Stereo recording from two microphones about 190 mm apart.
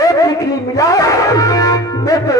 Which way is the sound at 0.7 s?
20° left (ahead or behind).